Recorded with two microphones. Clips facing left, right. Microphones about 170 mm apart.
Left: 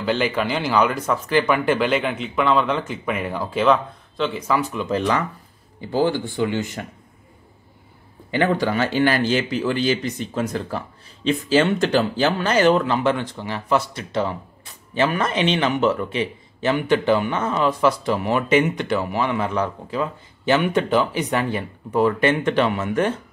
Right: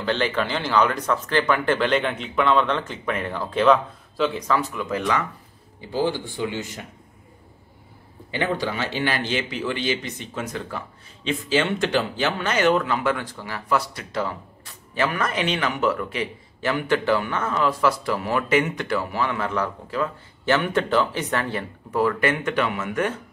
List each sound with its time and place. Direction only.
0.0 s speech: 10° left (ahead or behind)
4.7 s a man's voice: 25° left (ahead or behind)
5.9 s speech: 55° left (ahead or behind)
8.3 s a man's voice: 50° left (ahead or behind); by 23.1 s 30° left (ahead or behind)